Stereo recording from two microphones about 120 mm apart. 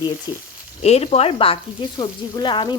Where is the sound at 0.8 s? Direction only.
60° left (ahead or behind).